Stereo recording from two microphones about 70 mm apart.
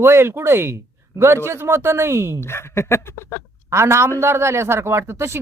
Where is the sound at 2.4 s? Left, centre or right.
Left.